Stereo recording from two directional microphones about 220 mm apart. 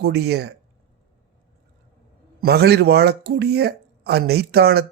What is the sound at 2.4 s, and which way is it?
Speech, 45° right (ahead or behind).